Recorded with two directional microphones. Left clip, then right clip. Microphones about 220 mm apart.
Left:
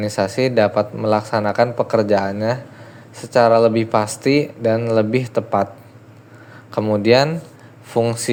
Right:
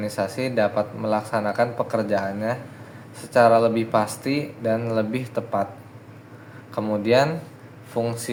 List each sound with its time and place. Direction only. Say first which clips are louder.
0.0 s a man's voice: left 7 dB; 35° left (ahead or behind)
6.7 s a man's voice: left 5 dB; 30° left (ahead or behind)